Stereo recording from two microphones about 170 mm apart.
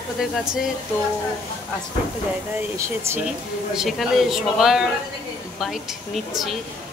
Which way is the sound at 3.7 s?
Centre (ahead or behind).